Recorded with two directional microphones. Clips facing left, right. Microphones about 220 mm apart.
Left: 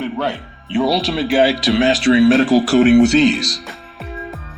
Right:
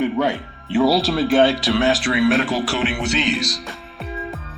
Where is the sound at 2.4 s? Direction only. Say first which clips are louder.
Left 10 dB; 40° left (ahead or behind).